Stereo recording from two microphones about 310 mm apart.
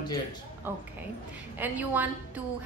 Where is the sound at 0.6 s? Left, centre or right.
Centre.